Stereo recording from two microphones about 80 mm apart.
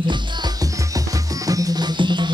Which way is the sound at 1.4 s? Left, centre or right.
Right.